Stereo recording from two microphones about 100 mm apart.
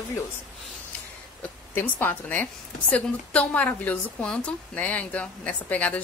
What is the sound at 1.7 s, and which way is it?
A woman's voice, 20° left (ahead or behind).